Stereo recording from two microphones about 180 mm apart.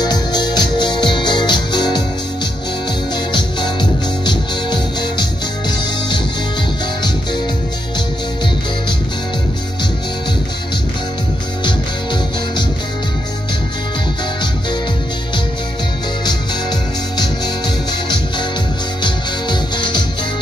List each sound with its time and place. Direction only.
0.0 s music: 25° left (ahead or behind)
4.3 s music: 25° left (ahead or behind)
19.0 s music: 25° left (ahead or behind)